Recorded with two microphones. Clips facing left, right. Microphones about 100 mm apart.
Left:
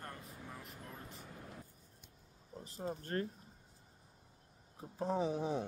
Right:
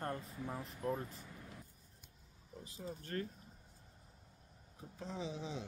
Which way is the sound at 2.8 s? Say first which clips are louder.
Left 4 dB; 45° left (ahead or behind).